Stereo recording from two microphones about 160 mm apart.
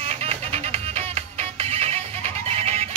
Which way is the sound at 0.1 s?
40° right (ahead or behind).